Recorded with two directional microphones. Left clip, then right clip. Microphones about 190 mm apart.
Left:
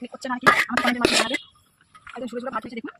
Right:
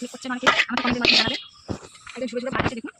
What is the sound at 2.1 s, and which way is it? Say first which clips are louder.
Speech: right 3 dB; 20° left (ahead or behind).